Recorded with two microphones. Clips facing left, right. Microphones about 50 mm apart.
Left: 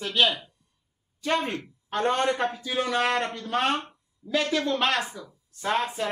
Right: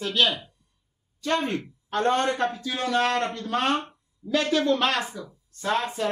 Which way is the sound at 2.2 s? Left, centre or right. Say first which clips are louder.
Even; centre.